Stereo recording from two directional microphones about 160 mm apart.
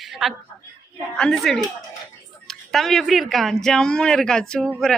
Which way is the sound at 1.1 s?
5° left (ahead or behind).